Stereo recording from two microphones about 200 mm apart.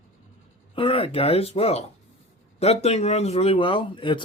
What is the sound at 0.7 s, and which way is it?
A man's voice, 25° left (ahead or behind).